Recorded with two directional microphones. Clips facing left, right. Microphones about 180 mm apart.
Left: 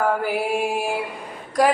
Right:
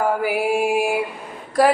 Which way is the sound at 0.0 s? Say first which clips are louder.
Right 2 dB; 10° right (ahead or behind).